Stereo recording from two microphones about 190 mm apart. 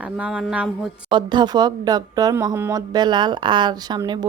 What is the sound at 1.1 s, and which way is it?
Speech, 25° right (ahead or behind).